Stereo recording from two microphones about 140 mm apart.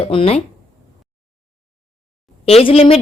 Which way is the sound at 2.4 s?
45° left (ahead or behind).